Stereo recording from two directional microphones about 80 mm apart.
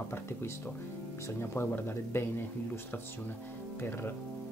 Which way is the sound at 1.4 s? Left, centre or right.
Left.